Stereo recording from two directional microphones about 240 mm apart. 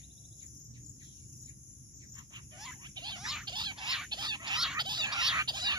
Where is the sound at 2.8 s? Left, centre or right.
Centre.